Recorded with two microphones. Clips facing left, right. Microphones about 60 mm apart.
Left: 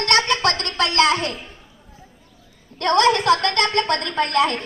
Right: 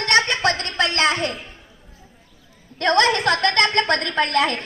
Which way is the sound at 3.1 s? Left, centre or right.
Right.